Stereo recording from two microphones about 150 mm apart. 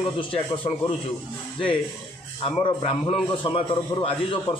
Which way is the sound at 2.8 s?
40° left (ahead or behind).